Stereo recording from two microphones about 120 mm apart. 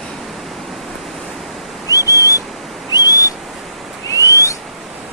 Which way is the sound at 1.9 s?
25° left (ahead or behind).